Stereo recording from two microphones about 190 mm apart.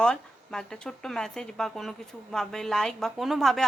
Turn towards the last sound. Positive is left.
turn(degrees=0)  # may be behind; listen again after turning